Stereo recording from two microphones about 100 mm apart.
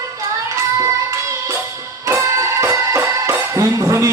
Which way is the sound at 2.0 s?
30° right (ahead or behind).